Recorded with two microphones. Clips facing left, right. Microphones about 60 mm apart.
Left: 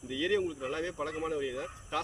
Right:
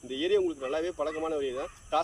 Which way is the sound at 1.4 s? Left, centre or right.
Centre.